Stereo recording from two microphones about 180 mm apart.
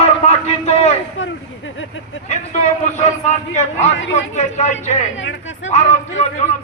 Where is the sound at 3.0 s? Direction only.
40° left (ahead or behind).